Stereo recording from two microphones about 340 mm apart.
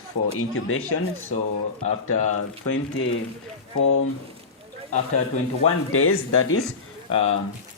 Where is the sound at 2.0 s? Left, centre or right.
Left.